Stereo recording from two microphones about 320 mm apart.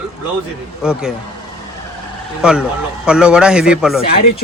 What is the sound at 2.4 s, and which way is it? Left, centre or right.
A man's voice, centre.